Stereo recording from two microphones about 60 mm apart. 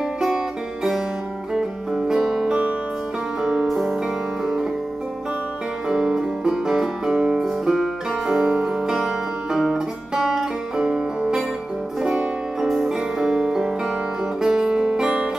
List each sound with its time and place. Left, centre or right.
1.5 s music: centre
3.6 s music: centre
5.9 s music: centre
7.2 s music: centre
7.4 s music: centre
8.8 s music: centre